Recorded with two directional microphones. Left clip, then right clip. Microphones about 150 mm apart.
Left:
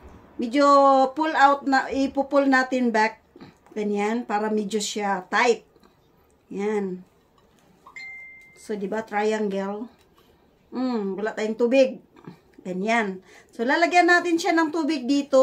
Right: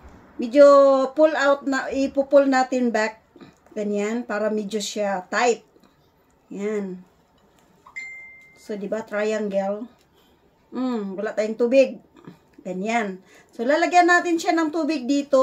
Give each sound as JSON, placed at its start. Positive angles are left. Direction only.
{"t": 0.4, "sound": "speech", "side_deg": 40}
{"t": 8.5, "sound": "speech", "side_deg": 45}